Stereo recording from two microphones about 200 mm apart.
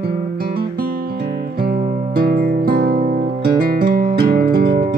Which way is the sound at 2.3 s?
50° right (ahead or behind).